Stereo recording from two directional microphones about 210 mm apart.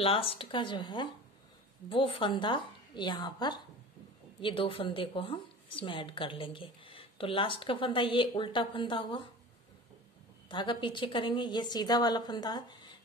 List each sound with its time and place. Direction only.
0.0 s a woman's voice: 25° left (ahead or behind)
10.5 s a woman's voice: 20° left (ahead or behind)